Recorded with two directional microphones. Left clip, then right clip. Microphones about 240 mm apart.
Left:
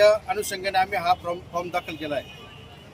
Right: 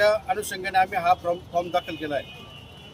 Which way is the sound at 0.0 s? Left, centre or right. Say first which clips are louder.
Left 3 dB; centre.